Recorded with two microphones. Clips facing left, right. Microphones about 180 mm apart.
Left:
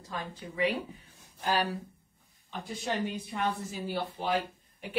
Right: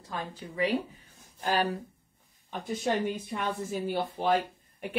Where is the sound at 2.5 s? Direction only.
45° right (ahead or behind).